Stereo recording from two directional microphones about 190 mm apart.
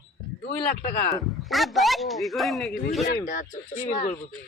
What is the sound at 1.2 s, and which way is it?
A man's voice, centre (ahead or behind).